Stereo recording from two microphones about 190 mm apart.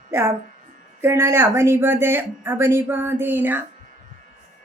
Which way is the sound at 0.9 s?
15° right (ahead or behind).